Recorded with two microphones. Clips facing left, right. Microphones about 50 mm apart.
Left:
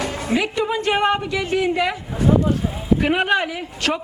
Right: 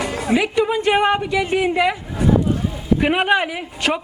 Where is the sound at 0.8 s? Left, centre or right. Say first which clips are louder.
Right 2 dB; centre.